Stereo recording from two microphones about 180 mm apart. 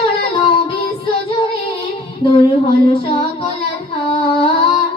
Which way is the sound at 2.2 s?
30° left (ahead or behind).